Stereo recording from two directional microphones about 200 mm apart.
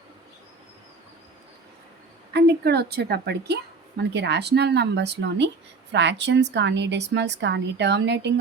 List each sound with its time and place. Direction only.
2.3 s a woman's voice: 55° right (ahead or behind)